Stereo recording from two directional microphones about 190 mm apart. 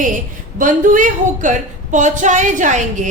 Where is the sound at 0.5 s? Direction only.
45° right (ahead or behind).